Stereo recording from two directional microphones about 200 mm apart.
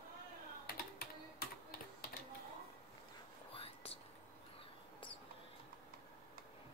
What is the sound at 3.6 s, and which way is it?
Whispering, 30° left (ahead or behind).